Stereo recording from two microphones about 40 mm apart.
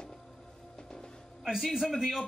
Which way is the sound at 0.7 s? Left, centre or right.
Centre.